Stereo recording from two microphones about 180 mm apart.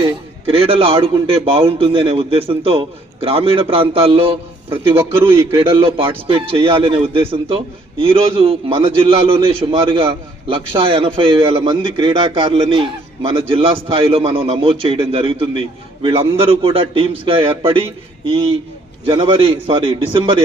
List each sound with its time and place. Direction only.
0.0 s a man's voice: 30° right (ahead or behind)
4.9 s a man's voice: 15° right (ahead or behind)
5.5 s a man's voice: 30° right (ahead or behind)